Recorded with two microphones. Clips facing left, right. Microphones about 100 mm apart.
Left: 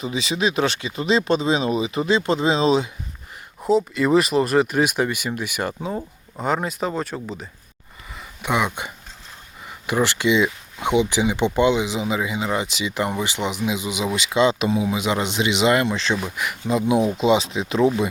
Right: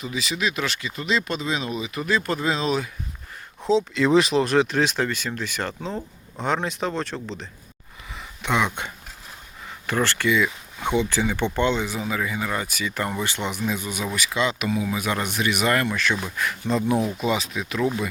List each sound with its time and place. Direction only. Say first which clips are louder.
0.0 s speech: left 4 dB; 30° left (ahead or behind)
3.6 s speech: left 1 dB; 5° left (ahead or behind)
8.1 s a sound: left 1 dB; 5° left (ahead or behind)
9.6 s speech: left 3 dB; 15° left (ahead or behind)